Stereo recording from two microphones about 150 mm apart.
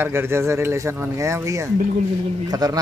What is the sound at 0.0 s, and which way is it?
Speech, 15° right (ahead or behind).